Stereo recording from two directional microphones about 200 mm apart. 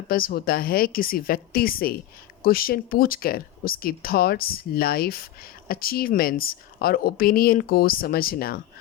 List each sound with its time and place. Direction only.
0.1 s a woman's voice: 50° left (ahead or behind)